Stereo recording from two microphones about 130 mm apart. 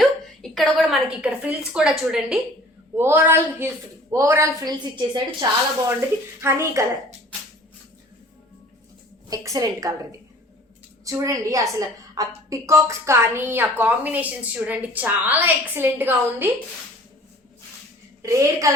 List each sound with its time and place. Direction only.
0.0 s a sound: 5° left (ahead or behind)
1.2 s a woman's voice: 10° right (ahead or behind)
2.9 s a woman's voice: 15° right (ahead or behind)
4.9 s a woman's voice: 35° right (ahead or behind)
6.4 s a woman's voice: 20° right (ahead or behind)
9.3 s a woman's voice: 25° right (ahead or behind)
18.2 s a woman's voice: 25° right (ahead or behind)